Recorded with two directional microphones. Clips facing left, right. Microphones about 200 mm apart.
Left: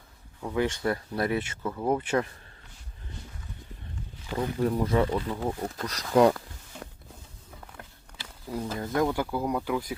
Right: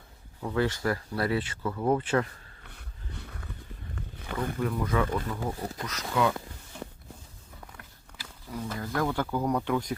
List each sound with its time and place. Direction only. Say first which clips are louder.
0.5 s speech: left 1 dB; 20° left (ahead or behind)
2.6 s a sound: right 3 dB; 60° right (ahead or behind)
4.6 s speech: left 4 dB; 30° left (ahead or behind)
5.9 s speech: left 7 dB; 35° left (ahead or behind)
8.2 s speech: left 3 dB; 25° left (ahead or behind); by 9.8 s 5° left (ahead or behind)